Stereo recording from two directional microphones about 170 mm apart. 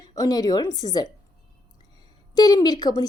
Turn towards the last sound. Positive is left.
turn(degrees=25)  # may be behind; listen again after turning